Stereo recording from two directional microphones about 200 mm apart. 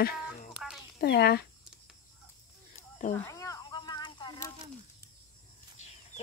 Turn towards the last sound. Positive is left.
turn(degrees=20)  # may be behind; listen again after turning